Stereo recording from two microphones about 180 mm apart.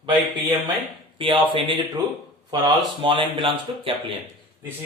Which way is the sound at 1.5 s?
25° right (ahead or behind).